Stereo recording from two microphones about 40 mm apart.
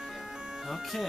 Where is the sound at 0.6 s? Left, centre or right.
Centre.